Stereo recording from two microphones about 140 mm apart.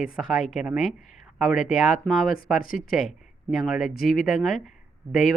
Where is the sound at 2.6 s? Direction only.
75° left (ahead or behind).